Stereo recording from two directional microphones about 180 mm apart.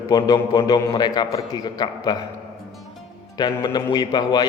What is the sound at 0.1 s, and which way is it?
A man's voice, 20° left (ahead or behind).